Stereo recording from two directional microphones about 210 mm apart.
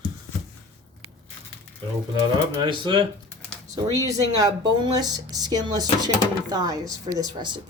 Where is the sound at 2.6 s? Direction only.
25° right (ahead or behind).